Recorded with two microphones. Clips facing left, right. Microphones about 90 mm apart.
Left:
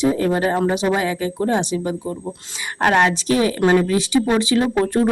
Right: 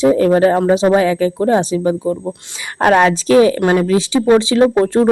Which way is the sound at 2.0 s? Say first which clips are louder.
Right 8 dB; 20° right (ahead or behind).